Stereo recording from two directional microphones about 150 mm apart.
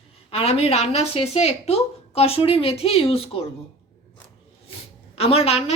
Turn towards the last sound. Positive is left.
turn(degrees=40)  # may be behind; listen again after turning